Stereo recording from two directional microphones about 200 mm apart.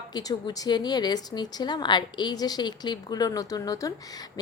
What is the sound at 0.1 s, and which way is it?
A woman's voice, 20° left (ahead or behind).